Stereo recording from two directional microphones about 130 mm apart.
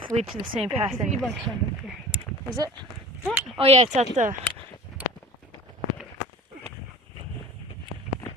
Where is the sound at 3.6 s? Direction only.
50° right (ahead or behind).